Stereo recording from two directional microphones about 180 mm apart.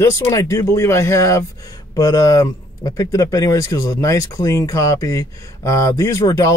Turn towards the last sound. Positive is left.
turn(degrees=20)  # may be behind; listen again after turning